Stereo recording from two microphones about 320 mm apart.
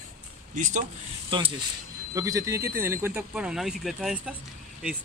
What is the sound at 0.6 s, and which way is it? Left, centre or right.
Speech, right.